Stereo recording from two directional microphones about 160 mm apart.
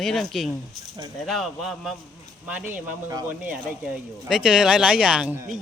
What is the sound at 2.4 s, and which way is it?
Speech, 10° right (ahead or behind).